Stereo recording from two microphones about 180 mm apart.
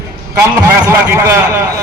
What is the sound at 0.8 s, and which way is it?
Speech, 15° right (ahead or behind).